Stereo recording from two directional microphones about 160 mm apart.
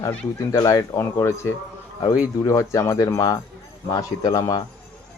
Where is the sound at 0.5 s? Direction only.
20° left (ahead or behind).